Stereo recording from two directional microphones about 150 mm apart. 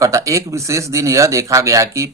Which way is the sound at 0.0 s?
20° right (ahead or behind).